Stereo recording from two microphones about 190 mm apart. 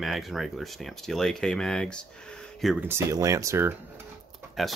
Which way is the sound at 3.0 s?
15° right (ahead or behind).